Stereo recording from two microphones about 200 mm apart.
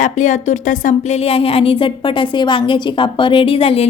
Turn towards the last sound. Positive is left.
turn(degrees=30)  # may be behind; listen again after turning